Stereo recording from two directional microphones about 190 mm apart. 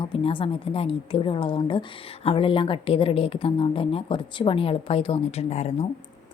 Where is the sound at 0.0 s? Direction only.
25° left (ahead or behind).